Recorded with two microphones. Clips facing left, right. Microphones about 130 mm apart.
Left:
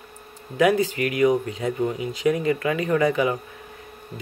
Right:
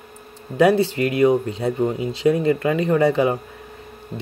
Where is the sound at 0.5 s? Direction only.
35° right (ahead or behind).